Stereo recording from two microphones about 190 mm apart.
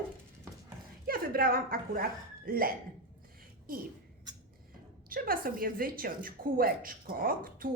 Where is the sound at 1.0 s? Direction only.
50° right (ahead or behind).